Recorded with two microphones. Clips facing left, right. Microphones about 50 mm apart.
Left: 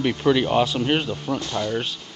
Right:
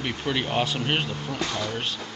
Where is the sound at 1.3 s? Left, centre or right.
Left.